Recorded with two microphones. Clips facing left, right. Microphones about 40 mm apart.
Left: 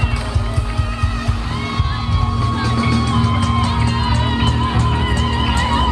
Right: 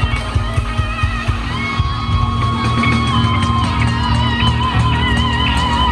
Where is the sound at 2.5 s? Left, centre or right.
Right.